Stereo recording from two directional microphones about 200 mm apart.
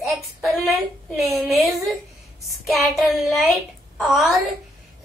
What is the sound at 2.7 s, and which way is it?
A woman's voice, centre (ahead or behind).